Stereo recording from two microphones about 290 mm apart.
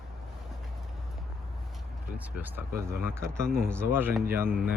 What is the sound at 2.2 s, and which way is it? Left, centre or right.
Speech, centre.